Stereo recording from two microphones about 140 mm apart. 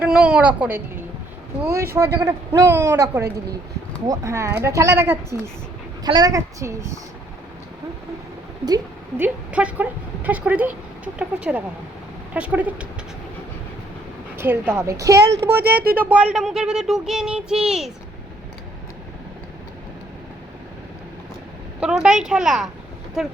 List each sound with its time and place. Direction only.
0.0 s a woman's voice: 5° right (ahead or behind)
6.1 s a man's voice: 30° right (ahead or behind)
9.1 s speech: 10° right (ahead or behind)
14.3 s speech: 15° right (ahead or behind)
15.6 s speech: 90° right
16.0 s child singing: 10° right (ahead or behind)
21.8 s child singing: 5° right (ahead or behind)